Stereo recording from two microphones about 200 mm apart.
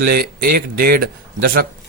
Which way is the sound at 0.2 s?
50° right (ahead or behind).